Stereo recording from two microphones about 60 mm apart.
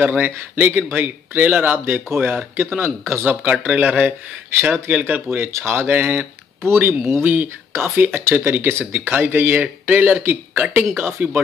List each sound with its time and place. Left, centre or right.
0.0 s speech: right
3.6 s speech: right
6.6 s speech: right